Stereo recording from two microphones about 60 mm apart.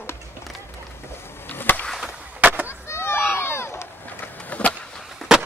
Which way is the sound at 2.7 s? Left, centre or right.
Left.